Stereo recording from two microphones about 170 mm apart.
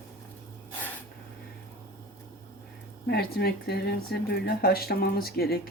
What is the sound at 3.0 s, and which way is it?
Speech, 70° left (ahead or behind).